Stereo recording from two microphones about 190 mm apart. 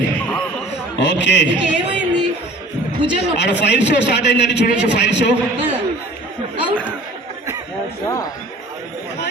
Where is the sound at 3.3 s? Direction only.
65° left (ahead or behind).